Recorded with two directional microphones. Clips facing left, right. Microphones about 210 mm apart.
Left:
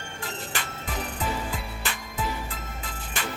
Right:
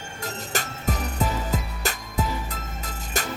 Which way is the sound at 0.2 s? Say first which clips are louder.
Right 4 dB; 40° right (ahead or behind).